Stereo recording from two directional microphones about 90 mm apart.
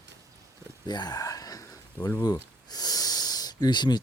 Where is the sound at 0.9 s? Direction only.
50° left (ahead or behind).